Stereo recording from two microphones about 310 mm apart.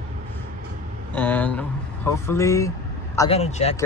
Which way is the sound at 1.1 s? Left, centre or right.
Centre.